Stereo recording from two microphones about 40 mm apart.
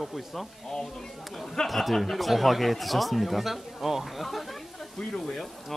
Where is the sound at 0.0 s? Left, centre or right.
Centre.